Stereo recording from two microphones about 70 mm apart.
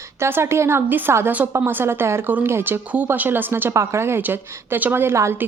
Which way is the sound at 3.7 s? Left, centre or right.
Right.